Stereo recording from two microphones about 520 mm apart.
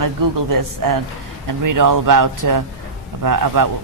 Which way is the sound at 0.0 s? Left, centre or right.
Right.